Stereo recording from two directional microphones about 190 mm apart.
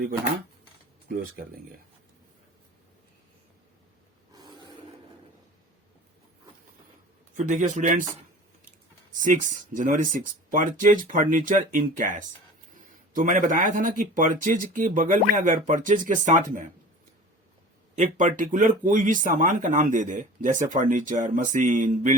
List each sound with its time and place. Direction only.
1.0 s speech: 50° right (ahead or behind)
4.3 s a sound: 20° right (ahead or behind)
7.3 s a man's voice: 40° right (ahead or behind)
9.2 s speech: 40° right (ahead or behind)
17.9 s speech: 40° right (ahead or behind)